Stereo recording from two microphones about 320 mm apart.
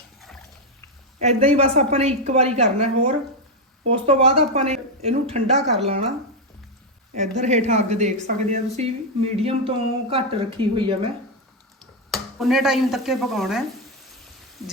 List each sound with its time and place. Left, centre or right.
1.2 s a woman's voice: centre
7.2 s a woman's voice: right
12.1 s stir: centre